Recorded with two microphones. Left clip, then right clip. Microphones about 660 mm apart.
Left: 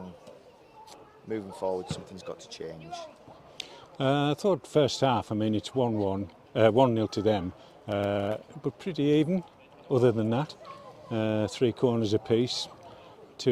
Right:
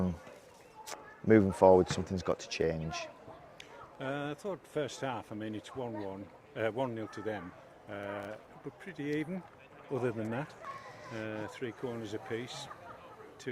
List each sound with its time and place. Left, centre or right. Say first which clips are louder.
1.3 s speech: right 9 dB; right
3.6 s speech: left 12 dB; left
8.8 s speech: left 11 dB; left
9.9 s speech: left 10 dB; left
11.1 s speech: left 12 dB; left